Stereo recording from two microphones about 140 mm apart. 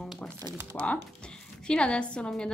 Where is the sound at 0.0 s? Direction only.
5° left (ahead or behind).